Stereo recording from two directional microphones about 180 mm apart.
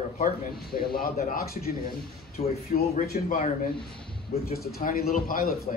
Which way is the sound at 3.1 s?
45° left (ahead or behind).